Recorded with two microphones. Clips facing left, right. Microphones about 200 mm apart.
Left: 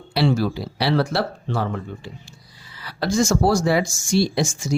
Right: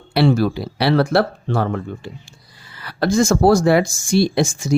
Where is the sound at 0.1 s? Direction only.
60° right (ahead or behind).